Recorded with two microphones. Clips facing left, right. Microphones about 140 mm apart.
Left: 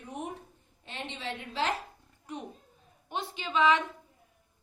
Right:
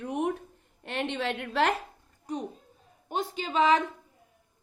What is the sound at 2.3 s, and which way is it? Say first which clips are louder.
A woman's voice: right 6 dB; 40° right (ahead or behind).